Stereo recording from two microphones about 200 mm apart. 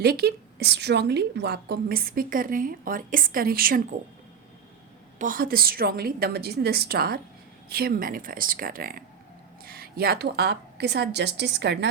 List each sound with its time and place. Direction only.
0.0 s a woman's voice: 50° right (ahead or behind)
5.2 s a woman's voice: 45° right (ahead or behind)